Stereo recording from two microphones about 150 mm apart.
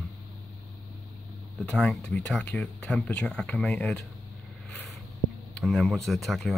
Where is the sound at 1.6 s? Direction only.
5° left (ahead or behind).